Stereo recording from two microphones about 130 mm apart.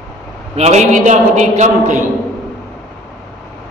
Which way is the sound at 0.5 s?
55° right (ahead or behind).